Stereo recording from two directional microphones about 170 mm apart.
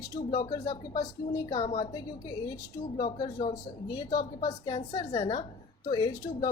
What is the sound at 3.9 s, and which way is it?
A woman's voice, 25° left (ahead or behind).